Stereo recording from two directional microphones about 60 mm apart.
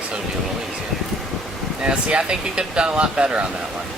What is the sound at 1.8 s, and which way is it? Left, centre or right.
Speech, centre.